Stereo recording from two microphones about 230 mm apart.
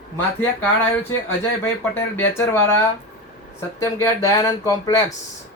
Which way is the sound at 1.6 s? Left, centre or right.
Centre.